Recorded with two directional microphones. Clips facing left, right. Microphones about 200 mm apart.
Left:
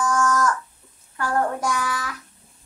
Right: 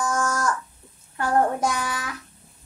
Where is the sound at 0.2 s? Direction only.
30° right (ahead or behind).